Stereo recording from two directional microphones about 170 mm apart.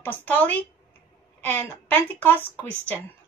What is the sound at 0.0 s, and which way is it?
Speech, 10° left (ahead or behind).